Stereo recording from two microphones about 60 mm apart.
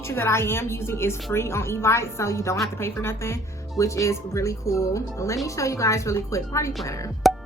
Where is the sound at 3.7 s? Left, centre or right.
Left.